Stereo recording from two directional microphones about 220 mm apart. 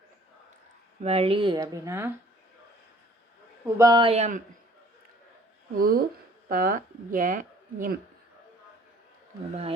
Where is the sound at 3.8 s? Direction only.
20° right (ahead or behind); by 4.4 s 35° right (ahead or behind).